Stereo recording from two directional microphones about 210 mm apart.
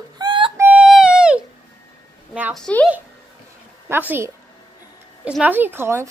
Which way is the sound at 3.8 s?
10° right (ahead or behind).